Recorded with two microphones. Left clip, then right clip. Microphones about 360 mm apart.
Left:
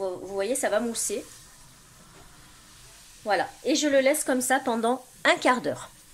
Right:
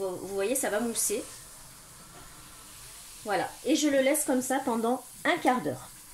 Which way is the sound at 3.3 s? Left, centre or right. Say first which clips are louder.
Left 3 dB; left.